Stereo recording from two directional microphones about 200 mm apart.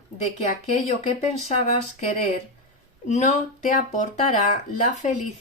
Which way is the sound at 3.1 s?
35° left (ahead or behind).